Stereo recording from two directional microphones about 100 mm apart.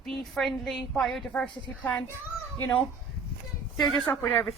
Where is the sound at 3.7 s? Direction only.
Centre (ahead or behind).